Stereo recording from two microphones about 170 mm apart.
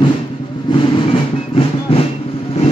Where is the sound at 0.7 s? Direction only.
30° left (ahead or behind).